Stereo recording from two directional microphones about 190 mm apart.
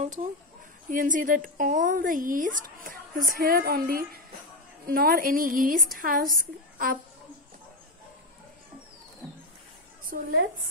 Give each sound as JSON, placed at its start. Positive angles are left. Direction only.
{"t": 0.8, "sound": "a woman's voice", "side_deg": -45}
{"t": 10.1, "sound": "a woman's voice", "side_deg": -50}